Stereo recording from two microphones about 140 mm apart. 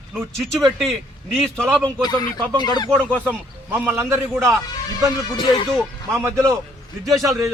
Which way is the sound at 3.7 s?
15° right (ahead or behind).